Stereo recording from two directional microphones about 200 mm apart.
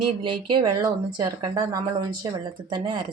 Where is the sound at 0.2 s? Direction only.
20° right (ahead or behind).